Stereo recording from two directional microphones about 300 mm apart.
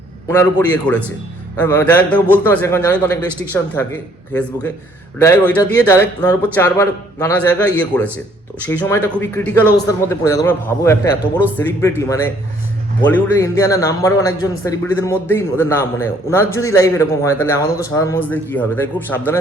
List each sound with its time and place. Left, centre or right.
0.3 s a man's voice: centre
5.2 s a man's voice: centre